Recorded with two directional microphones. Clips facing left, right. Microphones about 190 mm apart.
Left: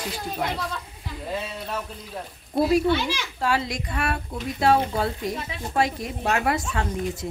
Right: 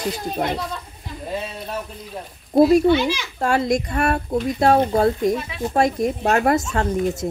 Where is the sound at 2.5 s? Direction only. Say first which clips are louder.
Right 7 dB; 45° right (ahead or behind).